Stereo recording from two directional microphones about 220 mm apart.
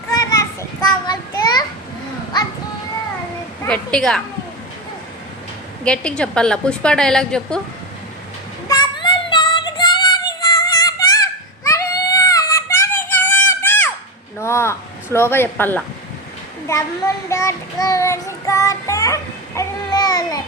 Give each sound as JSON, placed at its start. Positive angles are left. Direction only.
{"t": 0.1, "sound": "children playing", "side_deg": 15}
{"t": 3.6, "sound": "a woman's voice", "side_deg": 5}
{"t": 5.8, "sound": "a woman's voice", "side_deg": 5}
{"t": 8.6, "sound": "child singing", "side_deg": 15}
{"t": 14.3, "sound": "a sound", "side_deg": 10}
{"t": 16.6, "sound": "a child's voice", "side_deg": 15}